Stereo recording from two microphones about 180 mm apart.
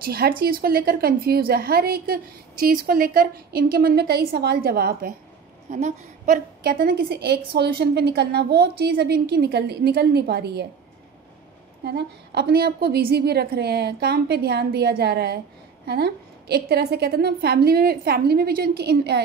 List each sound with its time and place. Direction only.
0.0 s a woman's voice: 60° right (ahead or behind)
5.7 s a woman's voice: 40° right (ahead or behind); by 10.7 s 65° right (ahead or behind)
11.8 s a woman's voice: 60° right (ahead or behind)